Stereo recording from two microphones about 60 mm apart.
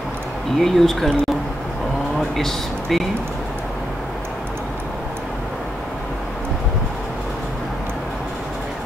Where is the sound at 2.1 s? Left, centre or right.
Centre.